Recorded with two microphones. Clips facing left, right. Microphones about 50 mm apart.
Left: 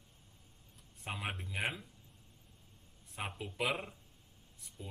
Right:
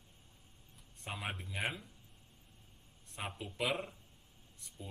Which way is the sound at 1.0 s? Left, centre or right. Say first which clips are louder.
Left 1 dB; centre.